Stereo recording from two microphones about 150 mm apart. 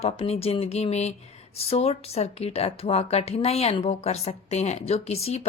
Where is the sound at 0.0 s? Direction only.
40° left (ahead or behind).